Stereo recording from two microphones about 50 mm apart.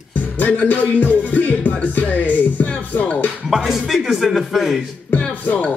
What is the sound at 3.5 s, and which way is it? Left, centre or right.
A man's voice, centre.